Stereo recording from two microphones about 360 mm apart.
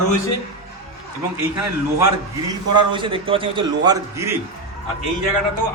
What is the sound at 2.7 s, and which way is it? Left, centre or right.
A man's voice, centre.